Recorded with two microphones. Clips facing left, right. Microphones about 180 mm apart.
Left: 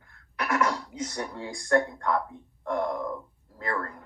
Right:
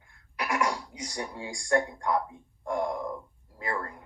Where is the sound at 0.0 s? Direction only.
15° right (ahead or behind).